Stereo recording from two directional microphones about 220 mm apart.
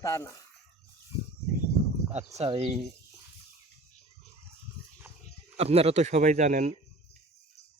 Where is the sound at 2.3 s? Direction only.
30° right (ahead or behind).